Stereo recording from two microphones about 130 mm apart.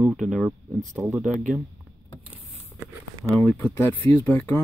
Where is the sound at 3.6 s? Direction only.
20° left (ahead or behind).